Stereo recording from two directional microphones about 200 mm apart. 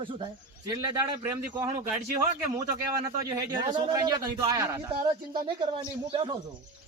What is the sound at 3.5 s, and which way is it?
A man's voice, 20° right (ahead or behind).